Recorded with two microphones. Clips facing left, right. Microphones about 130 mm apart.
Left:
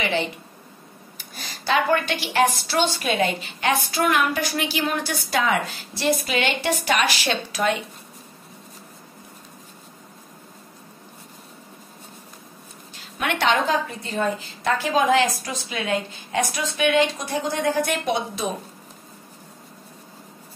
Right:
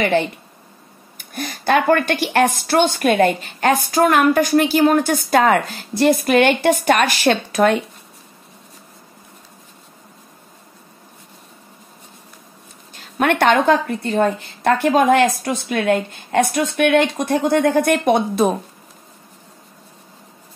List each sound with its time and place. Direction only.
0.0 s speech: 50° right (ahead or behind)
12.9 s a woman's voice: 50° right (ahead or behind)